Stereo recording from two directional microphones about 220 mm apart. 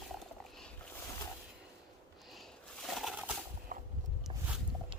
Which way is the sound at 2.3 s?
Centre (ahead or behind).